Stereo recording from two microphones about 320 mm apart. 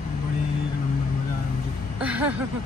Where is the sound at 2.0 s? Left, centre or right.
Centre.